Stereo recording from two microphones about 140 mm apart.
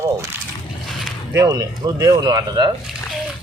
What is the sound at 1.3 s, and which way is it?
Speech, 25° right (ahead or behind).